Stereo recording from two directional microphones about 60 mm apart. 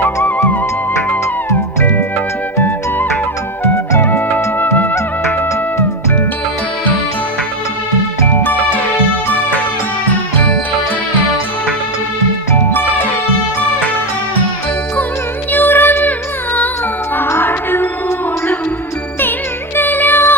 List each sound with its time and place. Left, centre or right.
1.5 s music: left
4.0 s music: left
8.3 s music: left
10.1 s music: left
15.5 s music: left
17.2 s music: left
19.7 s music: left